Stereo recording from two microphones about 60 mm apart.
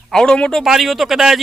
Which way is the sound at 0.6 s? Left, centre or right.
Centre.